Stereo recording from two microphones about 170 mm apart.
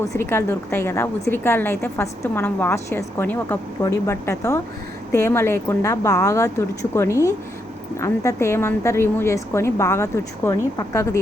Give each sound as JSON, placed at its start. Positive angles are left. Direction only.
{"t": 0.1, "sound": "a woman's voice", "side_deg": 15}